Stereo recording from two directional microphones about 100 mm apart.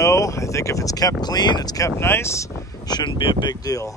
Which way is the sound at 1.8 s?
25° left (ahead or behind).